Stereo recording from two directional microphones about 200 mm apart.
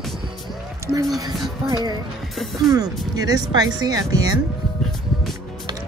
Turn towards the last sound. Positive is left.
turn(degrees=-20)  # may be behind; listen again after turning